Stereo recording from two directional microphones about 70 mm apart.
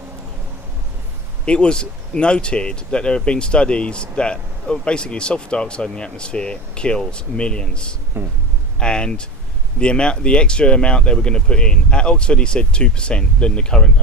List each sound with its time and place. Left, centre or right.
1.5 s speech: centre
8.1 s speech: right
8.8 s speech: centre